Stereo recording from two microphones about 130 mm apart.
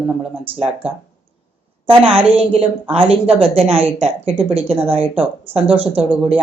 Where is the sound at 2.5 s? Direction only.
50° right (ahead or behind).